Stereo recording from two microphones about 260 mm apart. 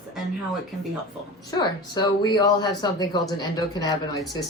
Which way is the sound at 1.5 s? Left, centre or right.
Centre.